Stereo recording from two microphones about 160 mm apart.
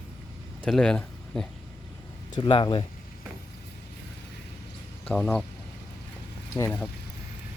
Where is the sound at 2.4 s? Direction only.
30° left (ahead or behind).